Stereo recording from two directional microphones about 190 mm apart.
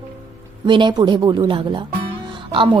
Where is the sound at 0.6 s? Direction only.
25° right (ahead or behind).